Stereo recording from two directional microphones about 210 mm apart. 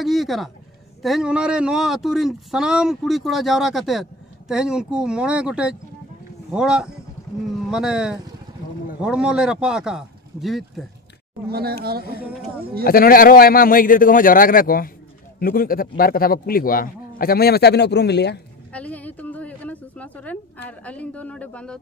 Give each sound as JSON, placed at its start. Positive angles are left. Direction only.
{"t": 0.0, "sound": "speech", "side_deg": 0}
{"t": 11.4, "sound": "speech", "side_deg": -50}
{"t": 12.8, "sound": "a man's voice", "side_deg": 45}
{"t": 18.7, "sound": "a sound", "side_deg": 5}
{"t": 20.8, "sound": "speech", "side_deg": 5}